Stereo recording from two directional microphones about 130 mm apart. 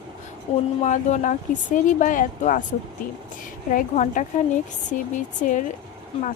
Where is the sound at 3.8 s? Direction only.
75° left (ahead or behind).